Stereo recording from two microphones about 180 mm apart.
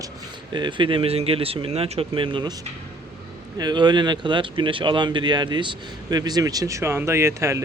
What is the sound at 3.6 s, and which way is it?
Speech, 25° right (ahead or behind).